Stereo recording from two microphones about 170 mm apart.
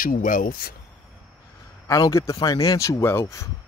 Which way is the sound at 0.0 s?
55° left (ahead or behind).